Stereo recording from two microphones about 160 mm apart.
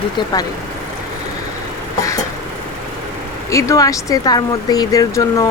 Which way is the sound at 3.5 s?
20° left (ahead or behind).